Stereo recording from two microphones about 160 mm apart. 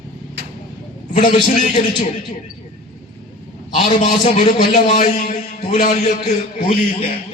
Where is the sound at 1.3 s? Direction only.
45° left (ahead or behind).